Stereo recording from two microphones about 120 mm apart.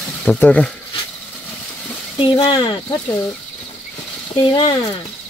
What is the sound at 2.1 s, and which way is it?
Speech, 45° left (ahead or behind).